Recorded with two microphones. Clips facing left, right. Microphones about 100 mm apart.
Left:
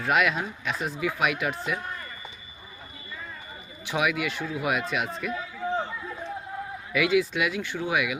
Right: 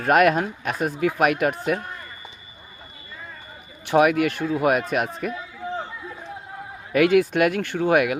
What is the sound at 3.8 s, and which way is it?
Speech, 45° right (ahead or behind).